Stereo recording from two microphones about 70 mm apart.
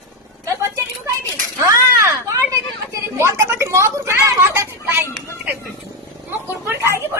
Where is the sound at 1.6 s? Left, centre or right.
Right.